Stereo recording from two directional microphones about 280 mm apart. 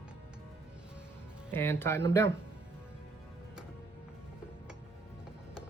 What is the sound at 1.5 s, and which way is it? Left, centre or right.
Speech, centre.